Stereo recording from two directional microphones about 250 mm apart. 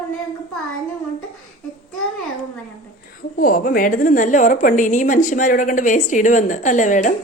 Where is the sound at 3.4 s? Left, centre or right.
Left.